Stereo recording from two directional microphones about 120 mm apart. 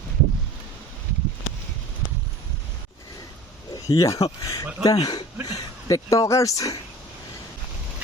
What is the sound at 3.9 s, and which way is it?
Speech, 30° left (ahead or behind).